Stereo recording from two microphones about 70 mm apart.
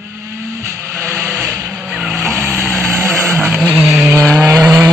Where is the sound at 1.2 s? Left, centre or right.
Centre.